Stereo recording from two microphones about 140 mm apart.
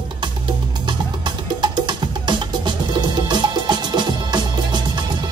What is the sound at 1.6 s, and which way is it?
Music, 30° right (ahead or behind).